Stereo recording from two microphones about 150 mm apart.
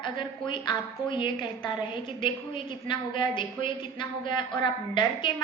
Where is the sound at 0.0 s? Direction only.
35° left (ahead or behind).